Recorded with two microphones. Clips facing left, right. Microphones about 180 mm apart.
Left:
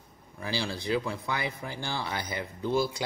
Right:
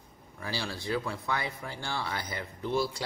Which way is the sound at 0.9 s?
20° left (ahead or behind).